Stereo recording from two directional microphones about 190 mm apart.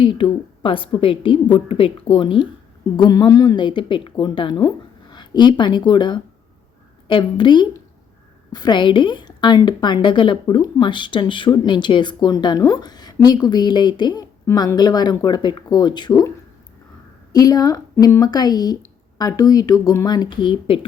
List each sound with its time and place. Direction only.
0.0 s a woman's voice: 25° left (ahead or behind)
17.3 s a woman's voice: 20° left (ahead or behind)